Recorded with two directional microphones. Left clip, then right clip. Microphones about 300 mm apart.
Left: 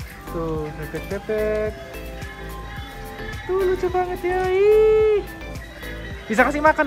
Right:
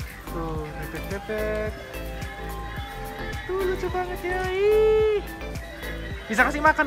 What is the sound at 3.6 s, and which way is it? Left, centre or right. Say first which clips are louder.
Speech: left 6 dB; centre.